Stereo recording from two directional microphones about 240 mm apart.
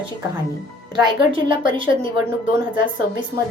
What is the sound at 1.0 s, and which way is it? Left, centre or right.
Speech, right.